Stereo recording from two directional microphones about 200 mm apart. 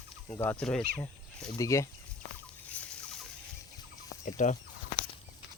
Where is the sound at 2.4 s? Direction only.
5° left (ahead or behind).